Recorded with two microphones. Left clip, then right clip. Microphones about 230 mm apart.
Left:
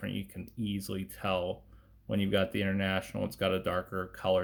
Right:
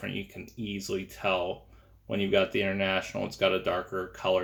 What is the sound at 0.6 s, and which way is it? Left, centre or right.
Speech, left.